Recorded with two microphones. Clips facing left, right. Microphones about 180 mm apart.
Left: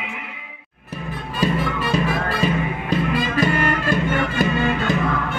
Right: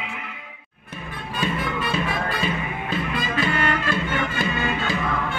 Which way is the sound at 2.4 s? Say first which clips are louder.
Left 5 dB; 40° left (ahead or behind).